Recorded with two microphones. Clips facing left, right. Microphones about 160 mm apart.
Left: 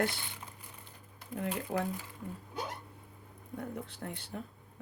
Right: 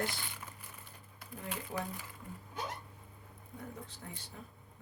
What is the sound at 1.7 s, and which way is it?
Speech, 70° left (ahead or behind).